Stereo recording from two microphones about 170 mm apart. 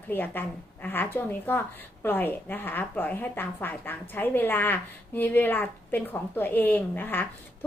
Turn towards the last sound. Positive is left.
turn(degrees=10)  # may be behind; listen again after turning